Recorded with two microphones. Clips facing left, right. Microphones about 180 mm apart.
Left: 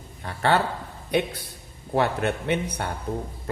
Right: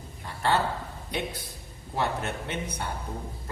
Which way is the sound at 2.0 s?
65° left (ahead or behind).